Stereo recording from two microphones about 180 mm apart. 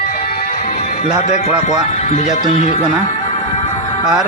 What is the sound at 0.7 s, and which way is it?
Music, 40° left (ahead or behind).